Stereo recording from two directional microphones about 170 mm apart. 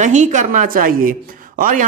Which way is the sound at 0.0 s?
45° right (ahead or behind).